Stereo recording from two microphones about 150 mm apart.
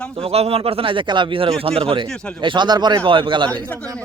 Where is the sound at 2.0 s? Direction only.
5° left (ahead or behind).